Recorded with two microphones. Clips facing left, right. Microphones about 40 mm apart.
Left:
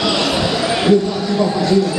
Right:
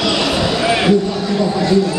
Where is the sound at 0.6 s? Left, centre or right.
Centre.